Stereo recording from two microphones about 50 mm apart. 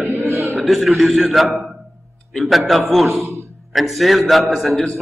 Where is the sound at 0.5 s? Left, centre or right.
Centre.